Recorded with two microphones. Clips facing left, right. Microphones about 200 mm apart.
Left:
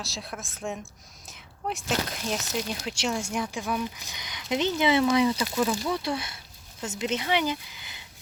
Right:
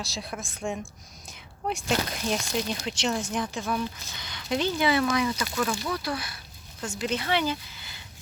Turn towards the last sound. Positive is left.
turn(degrees=15)  # may be behind; listen again after turning